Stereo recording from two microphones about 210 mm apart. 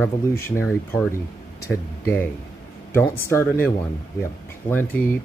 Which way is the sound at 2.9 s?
10° left (ahead or behind).